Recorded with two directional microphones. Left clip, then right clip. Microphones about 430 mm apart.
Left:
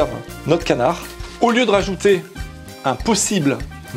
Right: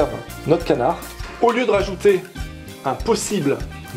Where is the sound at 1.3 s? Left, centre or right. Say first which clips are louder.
Left 2 dB; left.